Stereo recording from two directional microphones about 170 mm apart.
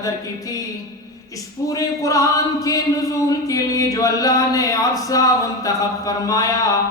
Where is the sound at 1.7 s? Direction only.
20° left (ahead or behind).